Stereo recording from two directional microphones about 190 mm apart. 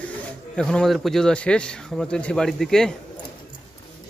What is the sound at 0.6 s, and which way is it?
A man's voice, 5° left (ahead or behind).